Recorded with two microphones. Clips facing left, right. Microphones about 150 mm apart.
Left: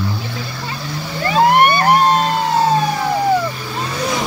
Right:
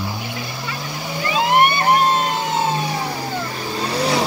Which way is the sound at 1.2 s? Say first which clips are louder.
Left 4 dB; 45° left (ahead or behind).